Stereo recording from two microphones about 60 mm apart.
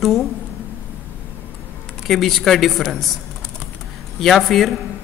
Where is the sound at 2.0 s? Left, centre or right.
Centre.